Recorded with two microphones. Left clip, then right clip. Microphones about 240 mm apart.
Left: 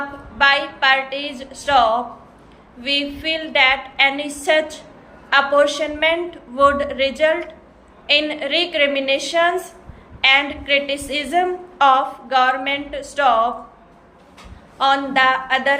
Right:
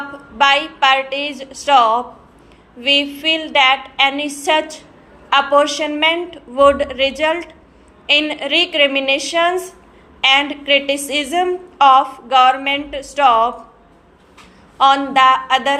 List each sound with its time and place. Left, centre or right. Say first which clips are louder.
0.3 s a woman's voice: right 2 dB; centre
14.8 s a woman's voice: right 4 dB; centre